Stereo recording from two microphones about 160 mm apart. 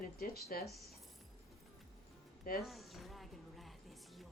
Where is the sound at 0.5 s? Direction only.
65° left (ahead or behind).